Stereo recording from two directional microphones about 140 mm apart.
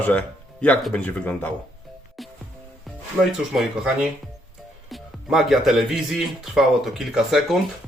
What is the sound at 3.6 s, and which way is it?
Speech, 5° right (ahead or behind).